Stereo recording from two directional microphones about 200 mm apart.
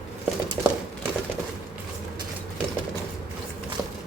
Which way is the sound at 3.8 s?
10° right (ahead or behind).